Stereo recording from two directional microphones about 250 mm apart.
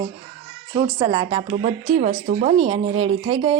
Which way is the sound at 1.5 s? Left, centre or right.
Right.